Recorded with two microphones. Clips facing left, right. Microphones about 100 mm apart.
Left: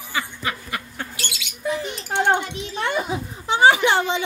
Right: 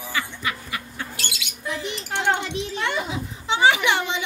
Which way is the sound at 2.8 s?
45° left (ahead or behind).